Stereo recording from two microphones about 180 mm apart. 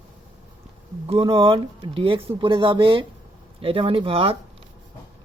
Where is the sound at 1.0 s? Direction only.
30° right (ahead or behind).